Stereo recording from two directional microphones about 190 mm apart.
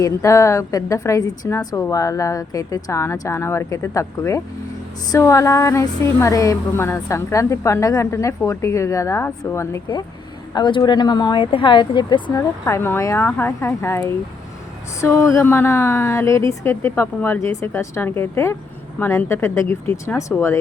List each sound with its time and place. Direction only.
0.0 s a woman's voice: 15° left (ahead or behind)